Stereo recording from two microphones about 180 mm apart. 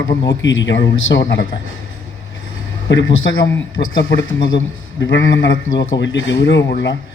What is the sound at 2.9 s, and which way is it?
Speech, 90° left.